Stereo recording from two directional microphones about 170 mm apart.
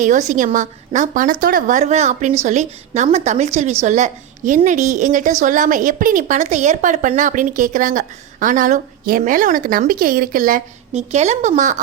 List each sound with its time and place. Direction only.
0.0 s a woman's voice: 45° right (ahead or behind)